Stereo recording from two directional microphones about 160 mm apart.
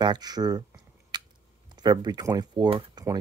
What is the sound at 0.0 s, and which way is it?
Speech, 25° right (ahead or behind).